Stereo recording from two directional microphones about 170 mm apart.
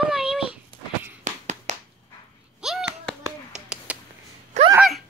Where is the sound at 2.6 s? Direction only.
5° right (ahead or behind).